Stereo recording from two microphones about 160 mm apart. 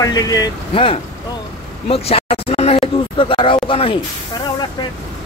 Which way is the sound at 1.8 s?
40° left (ahead or behind).